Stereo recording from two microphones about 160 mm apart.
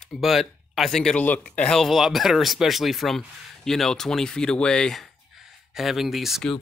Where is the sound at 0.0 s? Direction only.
Centre (ahead or behind).